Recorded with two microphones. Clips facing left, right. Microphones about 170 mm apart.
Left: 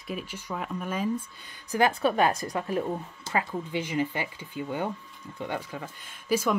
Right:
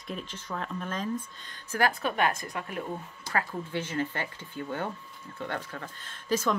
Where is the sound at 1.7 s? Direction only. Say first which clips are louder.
Left 4 dB; 20° left (ahead or behind).